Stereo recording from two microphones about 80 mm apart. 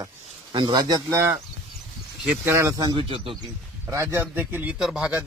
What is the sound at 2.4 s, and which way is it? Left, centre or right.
Speech, right.